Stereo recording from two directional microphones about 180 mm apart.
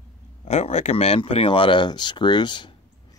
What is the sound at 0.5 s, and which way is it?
Speech, 40° left (ahead or behind).